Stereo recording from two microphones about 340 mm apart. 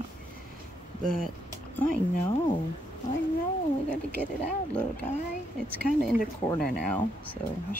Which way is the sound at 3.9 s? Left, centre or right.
Centre.